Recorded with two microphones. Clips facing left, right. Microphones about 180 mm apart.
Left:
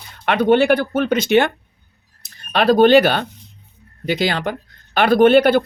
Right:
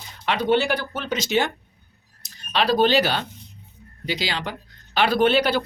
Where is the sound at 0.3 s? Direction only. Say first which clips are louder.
Left 7 dB; 55° left (ahead or behind).